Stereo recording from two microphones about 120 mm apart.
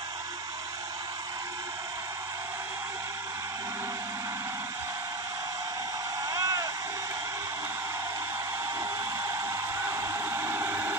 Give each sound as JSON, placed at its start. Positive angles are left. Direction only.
{"t": 6.3, "sound": "vehicle", "side_deg": -30}
{"t": 9.9, "sound": "hair dryer", "side_deg": -20}